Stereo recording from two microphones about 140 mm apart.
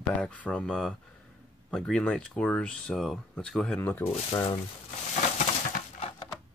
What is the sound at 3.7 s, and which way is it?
Speech, 15° left (ahead or behind).